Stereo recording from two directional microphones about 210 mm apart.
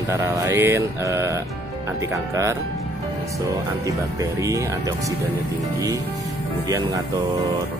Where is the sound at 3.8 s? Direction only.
15° right (ahead or behind).